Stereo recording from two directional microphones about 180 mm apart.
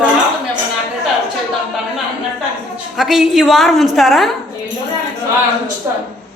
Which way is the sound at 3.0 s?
Centre (ahead or behind).